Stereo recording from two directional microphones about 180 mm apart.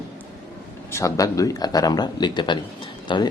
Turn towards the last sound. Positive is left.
turn(degrees=25)  # may be behind; listen again after turning